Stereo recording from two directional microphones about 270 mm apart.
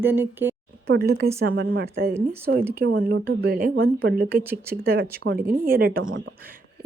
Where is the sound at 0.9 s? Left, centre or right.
Right.